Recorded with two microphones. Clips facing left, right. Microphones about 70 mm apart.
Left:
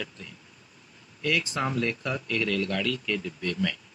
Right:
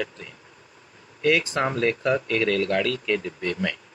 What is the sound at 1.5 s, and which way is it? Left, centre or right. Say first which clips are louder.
Speech: right 4 dB; right.